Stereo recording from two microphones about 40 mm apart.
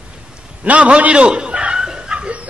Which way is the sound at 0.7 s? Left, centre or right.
Right.